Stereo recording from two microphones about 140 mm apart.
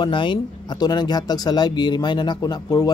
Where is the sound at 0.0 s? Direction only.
35° left (ahead or behind).